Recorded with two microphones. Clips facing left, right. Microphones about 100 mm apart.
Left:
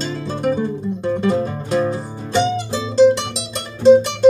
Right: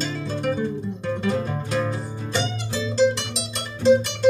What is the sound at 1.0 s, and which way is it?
Music, 30° left (ahead or behind).